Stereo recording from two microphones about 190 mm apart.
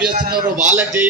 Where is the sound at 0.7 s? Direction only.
10° right (ahead or behind).